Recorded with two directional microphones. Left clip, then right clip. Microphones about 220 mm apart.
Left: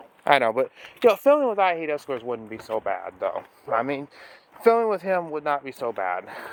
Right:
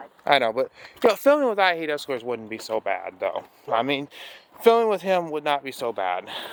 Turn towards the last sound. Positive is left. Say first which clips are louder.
# right 1 dB
turn(degrees=0)  # may be behind; listen again after turning